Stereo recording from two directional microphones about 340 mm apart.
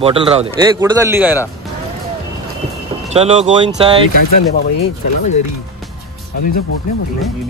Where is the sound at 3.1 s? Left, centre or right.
Centre.